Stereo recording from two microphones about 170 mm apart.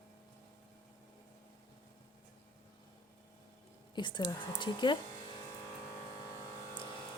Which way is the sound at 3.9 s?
25° left (ahead or behind).